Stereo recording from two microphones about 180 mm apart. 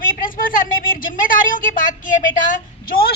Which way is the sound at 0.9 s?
50° left (ahead or behind).